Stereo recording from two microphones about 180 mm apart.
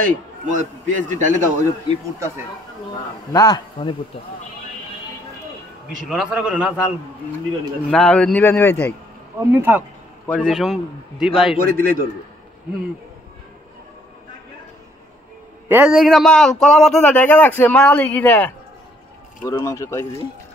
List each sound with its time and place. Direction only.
0.0 s a man's voice: 45° right (ahead or behind)
2.1 s speech: 15° right (ahead or behind)
3.3 s a man's voice: 20° left (ahead or behind)
6.0 s a man's voice: 5° right (ahead or behind)
7.9 s a man's voice: 5° left (ahead or behind)
9.4 s speech: 10° right (ahead or behind)
10.2 s a man's voice: 5° left (ahead or behind)
11.5 s a man's voice: 50° right (ahead or behind)
15.7 s a man's voice: 5° right (ahead or behind); by 20.1 s 15° left (ahead or behind)